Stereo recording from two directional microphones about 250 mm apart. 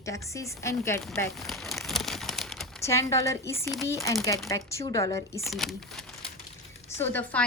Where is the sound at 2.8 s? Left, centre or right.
Centre.